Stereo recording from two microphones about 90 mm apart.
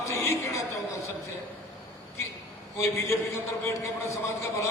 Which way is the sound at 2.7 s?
30° left (ahead or behind).